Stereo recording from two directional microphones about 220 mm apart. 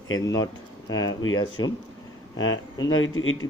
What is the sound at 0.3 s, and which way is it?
Speech, 15° left (ahead or behind).